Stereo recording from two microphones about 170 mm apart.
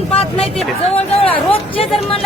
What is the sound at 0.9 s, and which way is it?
Speech, 35° left (ahead or behind).